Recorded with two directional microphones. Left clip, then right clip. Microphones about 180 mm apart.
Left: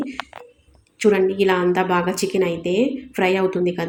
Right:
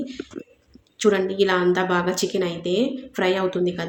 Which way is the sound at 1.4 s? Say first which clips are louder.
Left 2 dB; 10° left (ahead or behind).